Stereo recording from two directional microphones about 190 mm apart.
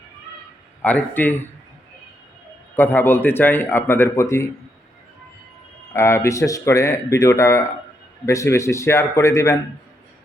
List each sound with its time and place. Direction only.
0.8 s a man's voice: 10° left (ahead or behind)
2.7 s a man's voice: 10° left (ahead or behind)
5.9 s a man's voice: 15° left (ahead or behind)